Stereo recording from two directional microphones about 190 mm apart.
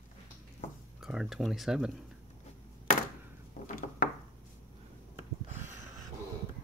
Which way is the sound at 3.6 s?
50° left (ahead or behind).